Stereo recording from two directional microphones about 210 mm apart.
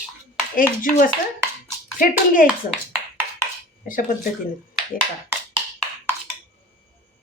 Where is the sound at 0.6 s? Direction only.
40° left (ahead or behind).